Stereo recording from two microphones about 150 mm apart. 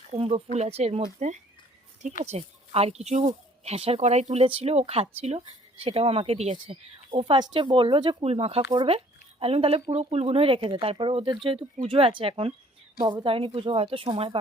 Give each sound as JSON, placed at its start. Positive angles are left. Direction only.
{"t": 0.1, "sound": "speech", "side_deg": -40}